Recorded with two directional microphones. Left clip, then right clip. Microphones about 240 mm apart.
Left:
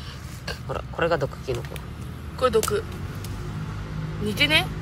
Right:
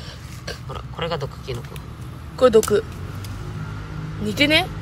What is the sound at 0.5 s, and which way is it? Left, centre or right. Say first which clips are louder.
Speech: left 2 dB; centre.